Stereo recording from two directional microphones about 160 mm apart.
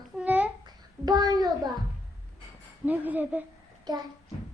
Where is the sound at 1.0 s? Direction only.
25° right (ahead or behind).